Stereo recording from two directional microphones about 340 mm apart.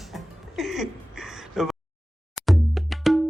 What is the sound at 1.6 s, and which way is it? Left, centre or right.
Speech, centre.